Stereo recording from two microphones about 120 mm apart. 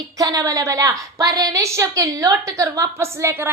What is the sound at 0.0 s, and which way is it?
A woman's voice, 30° right (ahead or behind).